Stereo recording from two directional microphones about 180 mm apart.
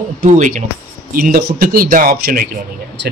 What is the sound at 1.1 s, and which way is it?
Speech, 55° right (ahead or behind).